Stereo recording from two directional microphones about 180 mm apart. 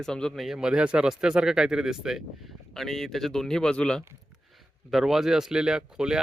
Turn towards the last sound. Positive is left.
turn(degrees=-5)  # may be behind; listen again after turning